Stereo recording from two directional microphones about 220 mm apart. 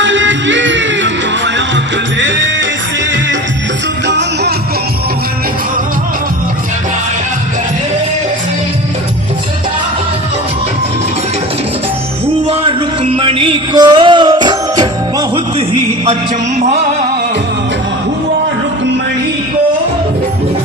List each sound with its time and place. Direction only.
0.0 s music: 55° right (ahead or behind)
4.0 s music: 50° right (ahead or behind)
12.5 s music: 25° right (ahead or behind)